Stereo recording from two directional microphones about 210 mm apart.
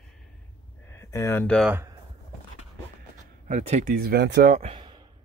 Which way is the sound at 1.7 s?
10° right (ahead or behind).